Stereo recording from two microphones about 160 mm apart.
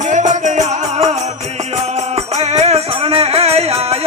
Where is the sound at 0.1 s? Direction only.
50° right (ahead or behind).